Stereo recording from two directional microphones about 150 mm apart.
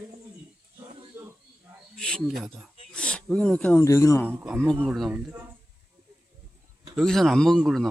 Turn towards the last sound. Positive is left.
turn(degrees=0)  # may be behind; listen again after turning